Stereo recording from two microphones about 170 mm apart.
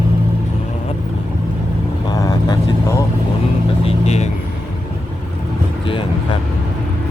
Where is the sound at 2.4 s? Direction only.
20° left (ahead or behind).